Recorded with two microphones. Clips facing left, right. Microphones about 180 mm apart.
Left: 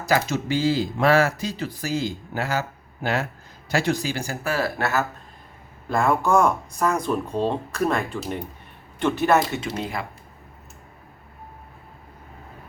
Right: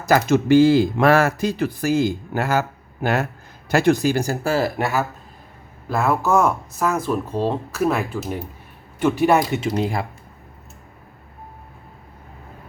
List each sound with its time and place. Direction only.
0.0 s speech: 50° right (ahead or behind)
4.4 s speech: 25° right (ahead or behind)
4.8 s speech: 10° right (ahead or behind)
9.7 s speech: 35° right (ahead or behind)